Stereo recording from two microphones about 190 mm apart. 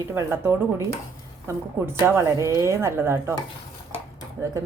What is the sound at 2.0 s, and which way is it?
Speech, 15° right (ahead or behind).